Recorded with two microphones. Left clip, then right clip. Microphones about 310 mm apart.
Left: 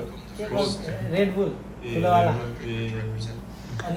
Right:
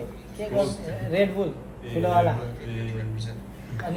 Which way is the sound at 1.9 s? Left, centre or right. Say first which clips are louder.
Left 2 dB; centre.